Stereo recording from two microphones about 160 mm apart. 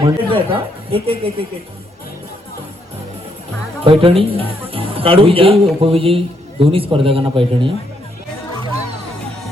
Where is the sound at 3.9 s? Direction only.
35° right (ahead or behind).